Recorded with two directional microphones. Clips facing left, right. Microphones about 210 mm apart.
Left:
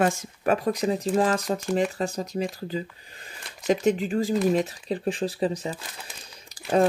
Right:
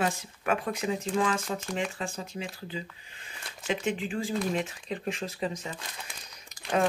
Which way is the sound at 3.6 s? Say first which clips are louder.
Left 8 dB; 40° left (ahead or behind).